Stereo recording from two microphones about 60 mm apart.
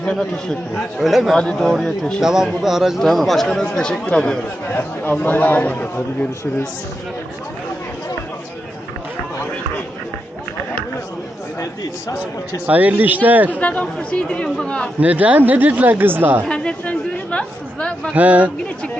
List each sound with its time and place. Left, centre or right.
0.0 s speech: centre
0.8 s speech: centre
1.4 s speech: centre
2.2 s a man's voice: centre
4.7 s a man's voice: left
11.6 s speech: left
12.6 s speech: right
13.5 s a man's voice: left
15.0 s speech: right
16.5 s chatter: centre
18.1 s speech: right